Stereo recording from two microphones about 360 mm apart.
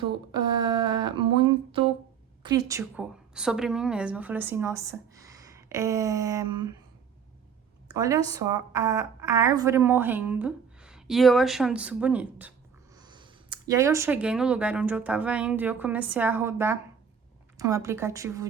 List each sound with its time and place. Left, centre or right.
0.3 s a woman's voice: centre
7.9 s a woman's voice: centre